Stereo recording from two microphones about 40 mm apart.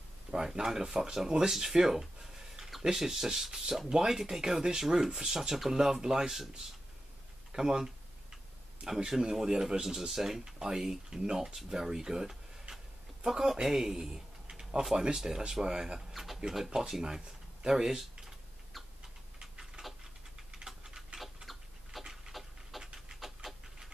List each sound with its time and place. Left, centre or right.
0.3 s speech: centre
7.5 s speech: centre
16.1 s a sound: centre
16.5 s speech: centre
19.4 s a sound: centre
20.6 s typing: centre
21.5 s a sound: centre
22.0 s dog: centre
22.3 s dog: centre